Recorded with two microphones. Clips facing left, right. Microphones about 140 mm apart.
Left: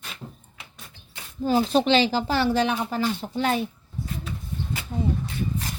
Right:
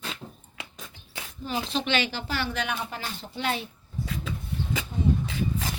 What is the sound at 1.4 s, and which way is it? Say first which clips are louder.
Speech: left 9 dB; 40° left (ahead or behind).